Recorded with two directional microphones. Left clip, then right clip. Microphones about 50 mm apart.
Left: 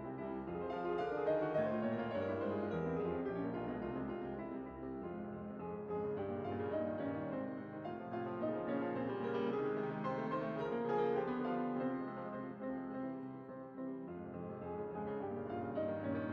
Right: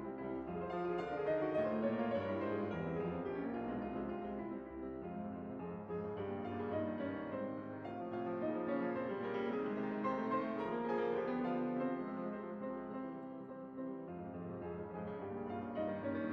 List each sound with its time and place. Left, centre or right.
0.7 s music: centre
8.3 s music: centre
15.7 s music: left